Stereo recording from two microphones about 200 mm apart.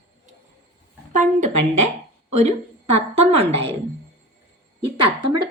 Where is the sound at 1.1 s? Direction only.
40° right (ahead or behind).